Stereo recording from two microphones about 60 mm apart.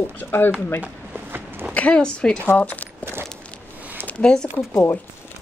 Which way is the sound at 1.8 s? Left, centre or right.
Centre.